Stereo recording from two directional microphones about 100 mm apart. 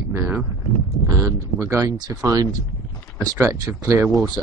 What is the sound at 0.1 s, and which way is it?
Speech, 25° right (ahead or behind).